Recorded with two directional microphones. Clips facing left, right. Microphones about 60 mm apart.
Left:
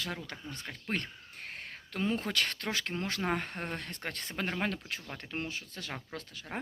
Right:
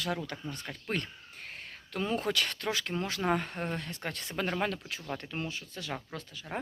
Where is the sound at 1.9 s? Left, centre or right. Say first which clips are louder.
Right 1 dB; left.